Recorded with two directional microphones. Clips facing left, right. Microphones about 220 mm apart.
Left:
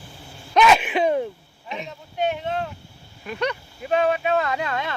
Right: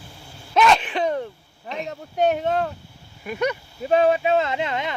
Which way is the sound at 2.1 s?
45° right (ahead or behind).